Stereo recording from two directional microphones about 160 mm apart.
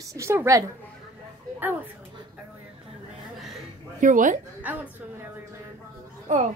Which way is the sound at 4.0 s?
55° right (ahead or behind).